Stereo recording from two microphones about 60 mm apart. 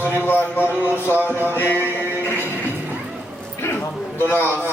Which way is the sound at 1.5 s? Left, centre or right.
Left.